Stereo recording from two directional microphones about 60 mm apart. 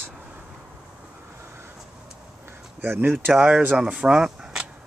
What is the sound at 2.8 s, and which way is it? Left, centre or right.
Speech, right.